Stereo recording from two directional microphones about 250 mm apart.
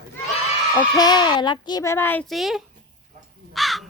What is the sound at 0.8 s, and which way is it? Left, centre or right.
A child's voice, centre.